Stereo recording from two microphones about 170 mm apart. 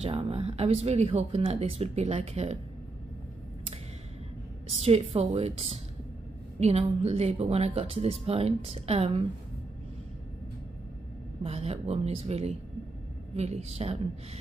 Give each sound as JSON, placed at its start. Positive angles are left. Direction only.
{"t": 0.0, "sound": "speech", "side_deg": -35}
{"t": 4.8, "sound": "speech", "side_deg": -35}
{"t": 11.4, "sound": "speech", "side_deg": -35}